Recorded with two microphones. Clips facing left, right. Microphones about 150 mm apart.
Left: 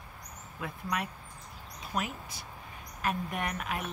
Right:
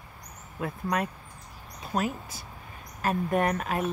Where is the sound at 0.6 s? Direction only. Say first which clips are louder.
Right 6 dB; 45° right (ahead or behind).